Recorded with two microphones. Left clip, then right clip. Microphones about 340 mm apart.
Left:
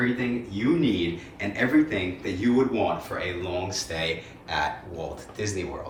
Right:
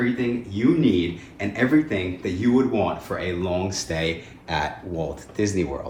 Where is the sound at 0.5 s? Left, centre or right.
Centre.